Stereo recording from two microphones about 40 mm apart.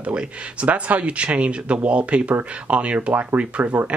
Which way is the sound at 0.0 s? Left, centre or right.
Right.